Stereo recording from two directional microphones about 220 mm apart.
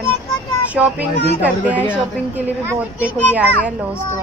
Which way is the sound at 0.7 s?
5° right (ahead or behind).